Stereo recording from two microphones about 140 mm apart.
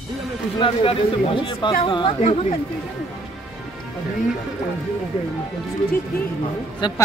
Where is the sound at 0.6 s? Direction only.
40° left (ahead or behind).